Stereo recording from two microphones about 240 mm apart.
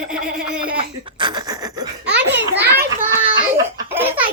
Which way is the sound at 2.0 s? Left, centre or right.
Right.